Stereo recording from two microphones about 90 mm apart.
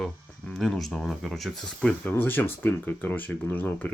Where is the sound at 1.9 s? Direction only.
25° left (ahead or behind).